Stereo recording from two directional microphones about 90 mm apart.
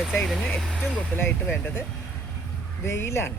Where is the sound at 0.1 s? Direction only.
Centre (ahead or behind).